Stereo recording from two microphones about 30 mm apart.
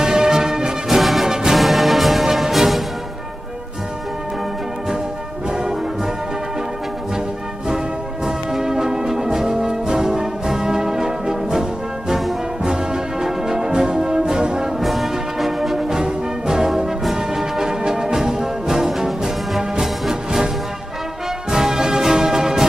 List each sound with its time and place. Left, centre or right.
0.0 s music: right
0.8 s music: centre
5.5 s brass instrument: right
8.3 s music: centre
12.6 s music: centre
13.8 s brass instrument: right
14.8 s brass instrument: centre
16.0 s music: centre